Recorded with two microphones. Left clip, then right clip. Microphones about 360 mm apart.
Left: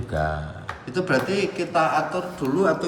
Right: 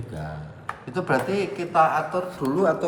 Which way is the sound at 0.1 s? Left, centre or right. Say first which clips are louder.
Left 12 dB; centre.